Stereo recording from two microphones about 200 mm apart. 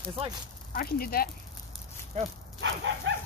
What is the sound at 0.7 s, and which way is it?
Speech, 50° left (ahead or behind).